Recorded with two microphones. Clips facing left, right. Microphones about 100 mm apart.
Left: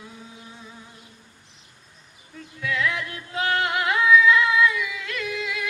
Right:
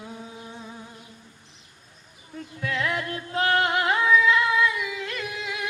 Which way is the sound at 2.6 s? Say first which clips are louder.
Left 1 dB; 35° right (ahead or behind).